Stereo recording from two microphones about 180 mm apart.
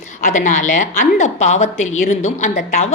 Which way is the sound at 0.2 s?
45° left (ahead or behind).